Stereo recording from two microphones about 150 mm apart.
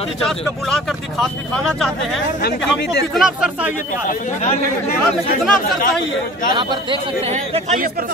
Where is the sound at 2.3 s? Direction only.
90° left.